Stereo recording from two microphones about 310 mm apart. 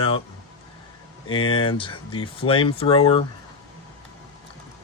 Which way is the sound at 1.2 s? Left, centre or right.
Centre.